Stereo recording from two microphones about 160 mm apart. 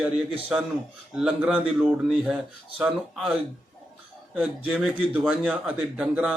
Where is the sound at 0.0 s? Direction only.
5° right (ahead or behind).